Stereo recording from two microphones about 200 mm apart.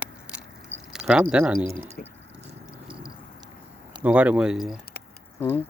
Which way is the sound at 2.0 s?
45° left (ahead or behind).